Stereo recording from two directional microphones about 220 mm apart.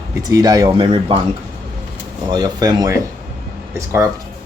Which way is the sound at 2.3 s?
20° right (ahead or behind).